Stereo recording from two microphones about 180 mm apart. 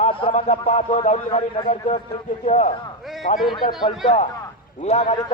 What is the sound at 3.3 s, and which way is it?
Speech, 50° left (ahead or behind).